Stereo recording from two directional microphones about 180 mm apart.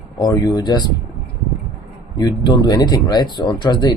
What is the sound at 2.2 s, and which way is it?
Speech, 25° left (ahead or behind).